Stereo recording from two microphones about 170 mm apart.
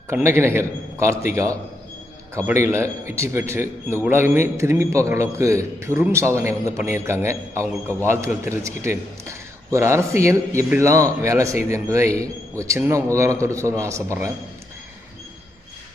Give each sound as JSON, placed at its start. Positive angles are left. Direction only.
{"t": 0.1, "sound": "a man's voice", "side_deg": -15}